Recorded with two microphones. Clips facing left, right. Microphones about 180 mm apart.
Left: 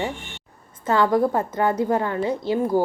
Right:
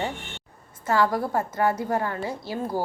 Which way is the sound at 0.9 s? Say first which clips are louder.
Left 4 dB; 20° left (ahead or behind).